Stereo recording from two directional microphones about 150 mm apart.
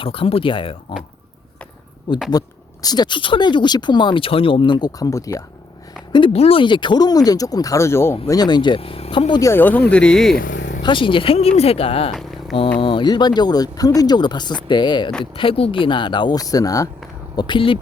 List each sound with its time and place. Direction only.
0.0 s speech: 35° left (ahead or behind)
2.1 s speech: 30° left (ahead or behind)
6.1 s speech: 40° left (ahead or behind); by 8.2 s 15° left (ahead or behind)
8.3 s speech: 30° left (ahead or behind)
9.4 s speech: 15° left (ahead or behind)
10.3 s vehicle: 60° left (ahead or behind)
10.8 s speech: 35° left (ahead or behind)